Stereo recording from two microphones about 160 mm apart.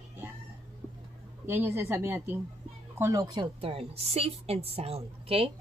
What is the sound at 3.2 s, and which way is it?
A woman's voice, 30° right (ahead or behind).